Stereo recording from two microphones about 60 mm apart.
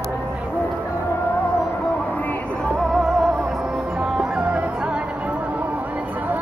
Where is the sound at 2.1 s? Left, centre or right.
Left.